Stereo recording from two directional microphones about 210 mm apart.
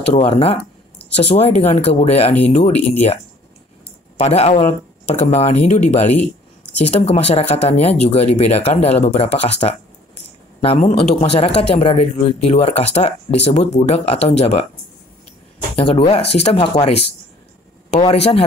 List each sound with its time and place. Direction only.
0.1 s speech: 30° left (ahead or behind)
4.2 s speech: 30° left (ahead or behind)
6.1 s a sound: 5° left (ahead or behind)
6.9 s speech: 30° left (ahead or behind)
15.7 s speech: 25° left (ahead or behind)